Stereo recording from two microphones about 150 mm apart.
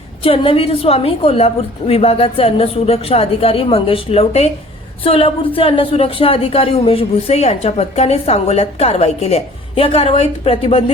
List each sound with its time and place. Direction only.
0.2 s speech: 40° left (ahead or behind)